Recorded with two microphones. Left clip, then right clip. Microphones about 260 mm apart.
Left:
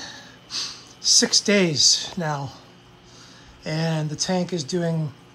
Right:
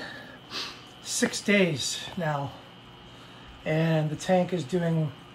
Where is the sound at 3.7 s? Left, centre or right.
Centre.